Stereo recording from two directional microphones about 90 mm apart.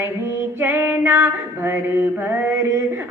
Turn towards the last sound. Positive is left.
turn(degrees=-25)  # may be behind; listen again after turning